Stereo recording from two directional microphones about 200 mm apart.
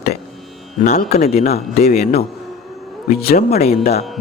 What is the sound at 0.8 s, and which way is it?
Speech, 35° left (ahead or behind).